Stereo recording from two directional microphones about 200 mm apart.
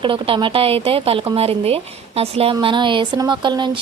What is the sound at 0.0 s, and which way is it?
Speech, 25° right (ahead or behind).